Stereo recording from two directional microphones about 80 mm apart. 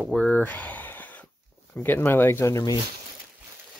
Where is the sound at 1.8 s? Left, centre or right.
Left.